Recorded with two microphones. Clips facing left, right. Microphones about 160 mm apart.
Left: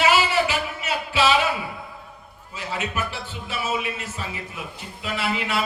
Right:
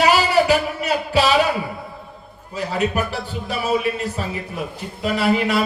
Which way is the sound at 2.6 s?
40° right (ahead or behind).